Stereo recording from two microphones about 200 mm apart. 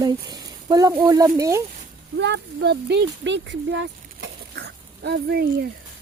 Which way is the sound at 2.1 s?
60° right (ahead or behind).